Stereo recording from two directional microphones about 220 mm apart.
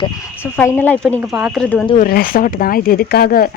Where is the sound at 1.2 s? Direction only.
5° right (ahead or behind).